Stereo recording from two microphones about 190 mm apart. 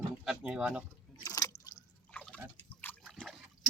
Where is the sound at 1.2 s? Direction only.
20° left (ahead or behind).